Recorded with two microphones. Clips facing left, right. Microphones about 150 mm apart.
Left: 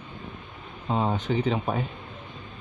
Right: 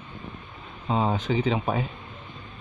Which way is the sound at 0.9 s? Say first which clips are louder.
Right 1 dB; 10° right (ahead or behind).